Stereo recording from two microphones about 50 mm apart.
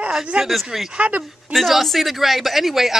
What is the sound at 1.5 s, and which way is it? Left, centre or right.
Speech, centre.